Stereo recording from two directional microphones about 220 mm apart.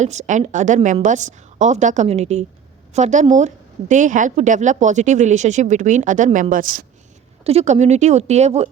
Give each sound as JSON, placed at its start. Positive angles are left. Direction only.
{"t": 0.0, "sound": "a woman's voice", "side_deg": -30}
{"t": 7.4, "sound": "a woman's voice", "side_deg": -30}